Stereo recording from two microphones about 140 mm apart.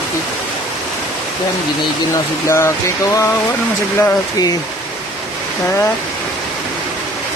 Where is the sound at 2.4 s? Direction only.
20° left (ahead or behind).